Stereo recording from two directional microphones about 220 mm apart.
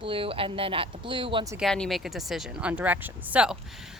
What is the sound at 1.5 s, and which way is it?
Speech, centre (ahead or behind).